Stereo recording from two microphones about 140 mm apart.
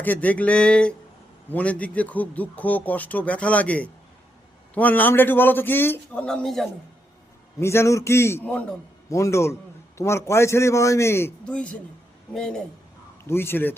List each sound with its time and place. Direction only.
0.0 s speech: 10° left (ahead or behind)
7.6 s a man's voice: 20° left (ahead or behind)
13.2 s speech: 15° left (ahead or behind)